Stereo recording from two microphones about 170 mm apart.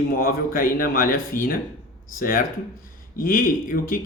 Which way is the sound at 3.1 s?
55° left (ahead or behind).